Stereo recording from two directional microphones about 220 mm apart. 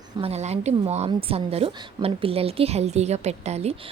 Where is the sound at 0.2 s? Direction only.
30° right (ahead or behind).